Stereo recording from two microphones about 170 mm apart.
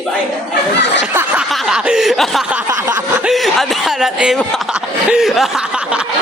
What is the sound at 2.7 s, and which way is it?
Speech, 20° right (ahead or behind).